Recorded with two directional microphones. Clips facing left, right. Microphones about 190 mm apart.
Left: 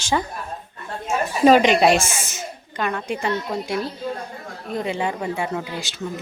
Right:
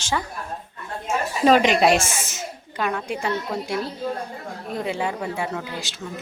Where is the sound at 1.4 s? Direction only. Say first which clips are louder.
Left 2 dB; centre (ahead or behind).